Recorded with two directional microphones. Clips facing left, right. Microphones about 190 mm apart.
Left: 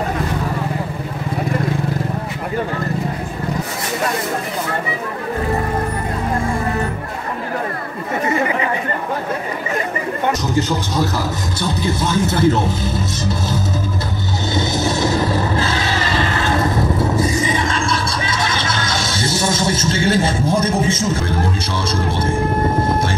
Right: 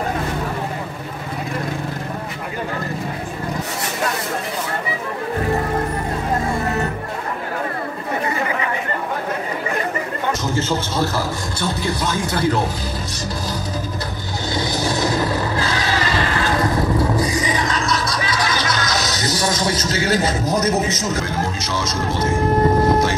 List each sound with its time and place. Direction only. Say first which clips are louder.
11.8 s speech: left 6 dB; 25° left (ahead or behind)
14.5 s a sound: left 2 dB; 25° left (ahead or behind)
21.8 s vehicle: left 1 dB; 30° left (ahead or behind)